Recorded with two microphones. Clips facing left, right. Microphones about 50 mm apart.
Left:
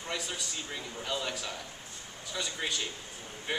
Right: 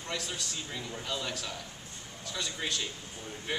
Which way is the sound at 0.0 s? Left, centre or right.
Centre.